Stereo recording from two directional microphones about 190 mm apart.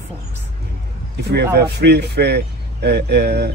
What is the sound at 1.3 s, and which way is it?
A man's voice, 60° right (ahead or behind).